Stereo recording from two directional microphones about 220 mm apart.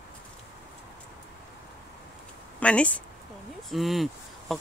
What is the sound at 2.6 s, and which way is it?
Speech, 5° left (ahead or behind).